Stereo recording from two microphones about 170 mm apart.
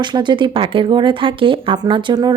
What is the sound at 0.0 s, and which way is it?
Speech, 25° right (ahead or behind).